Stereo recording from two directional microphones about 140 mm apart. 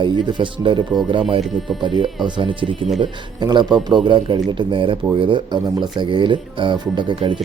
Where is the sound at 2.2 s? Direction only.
35° right (ahead or behind).